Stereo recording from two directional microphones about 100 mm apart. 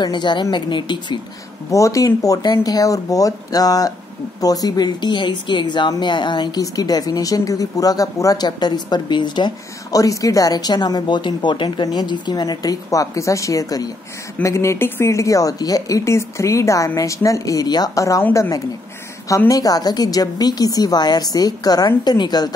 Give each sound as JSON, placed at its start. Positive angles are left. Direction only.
{"t": 0.0, "sound": "speech", "side_deg": 50}
{"t": 1.7, "sound": "speech", "side_deg": 30}
{"t": 9.9, "sound": "speech", "side_deg": 35}